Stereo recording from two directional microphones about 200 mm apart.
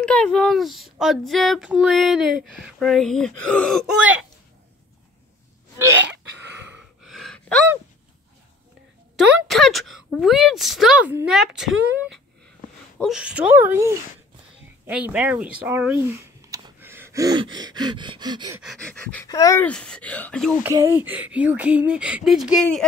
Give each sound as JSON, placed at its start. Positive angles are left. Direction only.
{"t": 0.0, "sound": "speech", "side_deg": 5}
{"t": 6.6, "sound": "gasp", "side_deg": -5}
{"t": 9.3, "sound": "speech", "side_deg": 0}
{"t": 18.6, "sound": "speech", "side_deg": 0}
{"t": 19.2, "sound": "speech", "side_deg": 15}
{"t": 19.7, "sound": "speech", "side_deg": 5}
{"t": 20.6, "sound": "speech", "side_deg": -10}